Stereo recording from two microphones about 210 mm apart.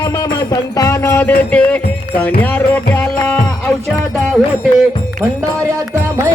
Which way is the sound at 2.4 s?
10° left (ahead or behind).